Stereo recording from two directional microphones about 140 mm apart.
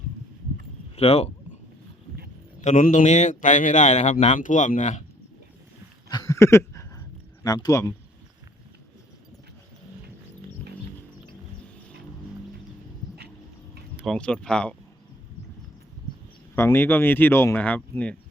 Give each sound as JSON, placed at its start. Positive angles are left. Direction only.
{"t": 0.9, "sound": "speech", "side_deg": 45}
{"t": 2.6, "sound": "speech", "side_deg": 65}
{"t": 6.1, "sound": "a sound", "side_deg": 25}
{"t": 7.4, "sound": "speech", "side_deg": 25}
{"t": 14.0, "sound": "speech", "side_deg": 5}
{"t": 16.6, "sound": "speech", "side_deg": 15}